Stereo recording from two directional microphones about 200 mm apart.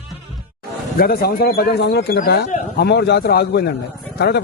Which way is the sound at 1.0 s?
50° left (ahead or behind).